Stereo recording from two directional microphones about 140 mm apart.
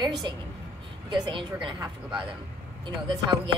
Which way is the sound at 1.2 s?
35° right (ahead or behind).